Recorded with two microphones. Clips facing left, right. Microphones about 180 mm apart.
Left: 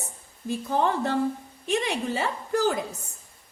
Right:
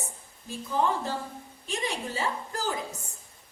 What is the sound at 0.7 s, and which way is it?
A woman's voice, 65° left (ahead or behind).